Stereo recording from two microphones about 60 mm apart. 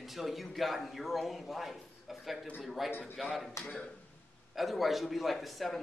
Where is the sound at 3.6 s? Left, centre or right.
Left.